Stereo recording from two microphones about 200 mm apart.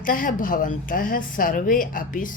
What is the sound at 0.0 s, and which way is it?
A woman's voice, 45° left (ahead or behind).